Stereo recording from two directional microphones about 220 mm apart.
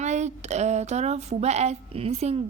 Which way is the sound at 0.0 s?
30° right (ahead or behind).